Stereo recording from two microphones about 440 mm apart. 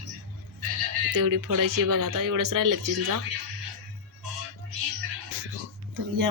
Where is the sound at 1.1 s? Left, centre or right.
Right.